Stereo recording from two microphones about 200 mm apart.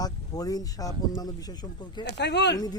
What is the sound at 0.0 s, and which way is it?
Speech, 20° left (ahead or behind).